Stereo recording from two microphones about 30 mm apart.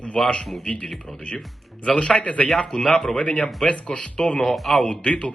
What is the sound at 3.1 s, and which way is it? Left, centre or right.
A man's voice, left.